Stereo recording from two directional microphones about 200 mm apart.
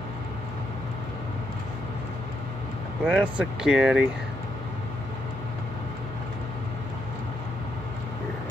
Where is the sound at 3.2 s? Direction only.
5° right (ahead or behind).